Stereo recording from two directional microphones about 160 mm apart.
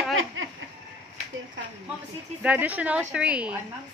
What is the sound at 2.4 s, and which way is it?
Speech, 10° right (ahead or behind).